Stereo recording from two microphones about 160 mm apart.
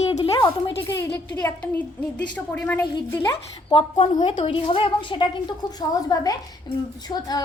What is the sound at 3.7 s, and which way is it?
A woman's voice, 35° left (ahead or behind).